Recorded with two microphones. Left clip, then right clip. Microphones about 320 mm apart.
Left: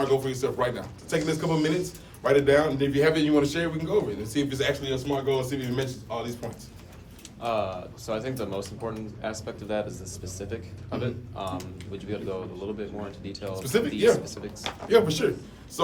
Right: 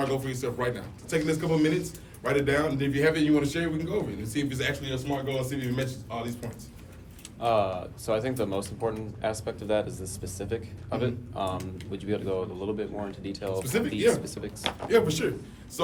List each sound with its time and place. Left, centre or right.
0.0 s a man's voice: centre
7.4 s speech: right
14.8 s a man's voice: centre